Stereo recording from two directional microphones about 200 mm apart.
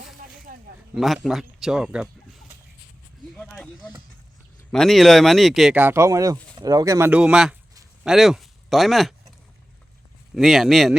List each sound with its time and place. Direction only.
0.5 s a sound: 45° right (ahead or behind)
0.9 s speech: centre (ahead or behind)
10.3 s speech: centre (ahead or behind)